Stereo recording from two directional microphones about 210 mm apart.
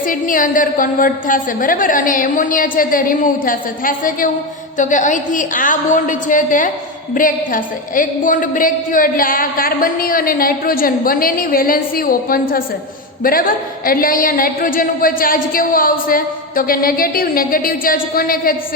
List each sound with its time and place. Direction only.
0.0 s a woman's voice: 40° left (ahead or behind)